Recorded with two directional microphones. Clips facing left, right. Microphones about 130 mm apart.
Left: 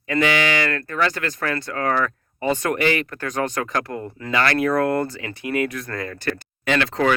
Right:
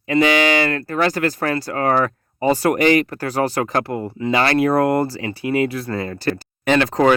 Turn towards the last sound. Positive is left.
turn(degrees=-40)  # may be behind; listen again after turning